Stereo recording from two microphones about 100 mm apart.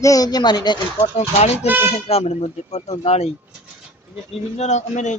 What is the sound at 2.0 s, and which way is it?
A man's voice, 90° left.